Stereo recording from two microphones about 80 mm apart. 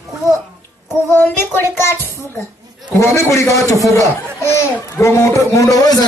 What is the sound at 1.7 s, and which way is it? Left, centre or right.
A man's voice, left.